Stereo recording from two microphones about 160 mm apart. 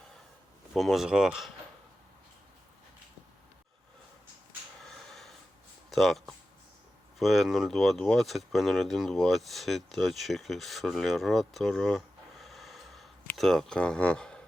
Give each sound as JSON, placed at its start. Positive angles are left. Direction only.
{"t": 0.7, "sound": "speech", "side_deg": 0}
{"t": 4.8, "sound": "snort", "side_deg": 5}
{"t": 5.9, "sound": "speech", "side_deg": 0}